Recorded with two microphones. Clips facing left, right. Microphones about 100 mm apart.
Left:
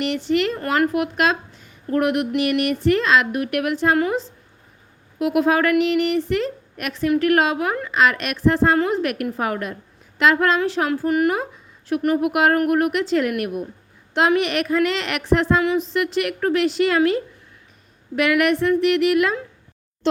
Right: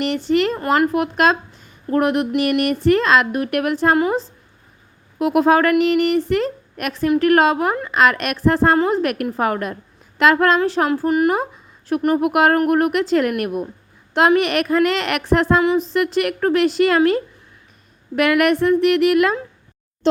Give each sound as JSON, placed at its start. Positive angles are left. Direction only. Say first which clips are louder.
{"t": 0.3, "sound": "a woman's voice", "louder": "right 4 dB", "side_deg": -40}
{"t": 5.2, "sound": "a woman's voice", "louder": "right 3 dB", "side_deg": -40}
{"t": 10.6, "sound": "a woman's voice", "louder": "right 3 dB", "side_deg": -35}